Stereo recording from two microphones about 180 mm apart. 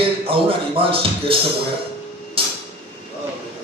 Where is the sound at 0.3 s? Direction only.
30° right (ahead or behind).